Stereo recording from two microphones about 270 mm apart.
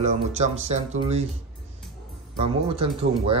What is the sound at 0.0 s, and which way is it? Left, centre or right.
Speech, right.